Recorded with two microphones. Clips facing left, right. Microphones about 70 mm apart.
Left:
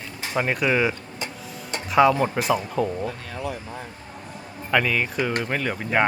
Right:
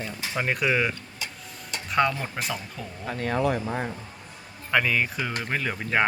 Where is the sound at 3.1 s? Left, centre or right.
Right.